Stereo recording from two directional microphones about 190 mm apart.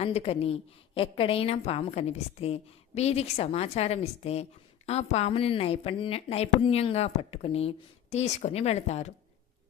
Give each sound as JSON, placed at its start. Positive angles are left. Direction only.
{"t": 0.0, "sound": "a woman's voice", "side_deg": 30}